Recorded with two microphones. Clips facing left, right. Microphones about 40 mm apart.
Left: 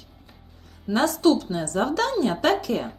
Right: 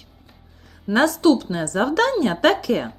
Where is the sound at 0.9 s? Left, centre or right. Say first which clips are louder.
Right 3 dB; right.